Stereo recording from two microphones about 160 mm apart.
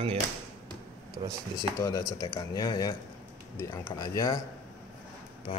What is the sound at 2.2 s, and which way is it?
Speech, 20° left (ahead or behind).